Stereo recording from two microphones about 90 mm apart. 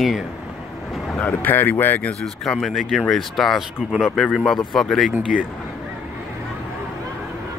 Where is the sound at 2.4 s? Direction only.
5° left (ahead or behind).